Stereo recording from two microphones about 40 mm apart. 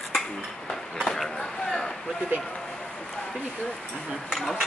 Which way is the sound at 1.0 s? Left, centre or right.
Centre.